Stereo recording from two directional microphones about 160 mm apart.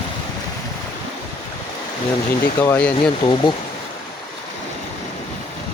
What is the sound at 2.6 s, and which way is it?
Speech, 10° left (ahead or behind).